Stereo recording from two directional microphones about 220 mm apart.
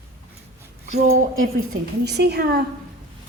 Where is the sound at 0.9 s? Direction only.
35° right (ahead or behind).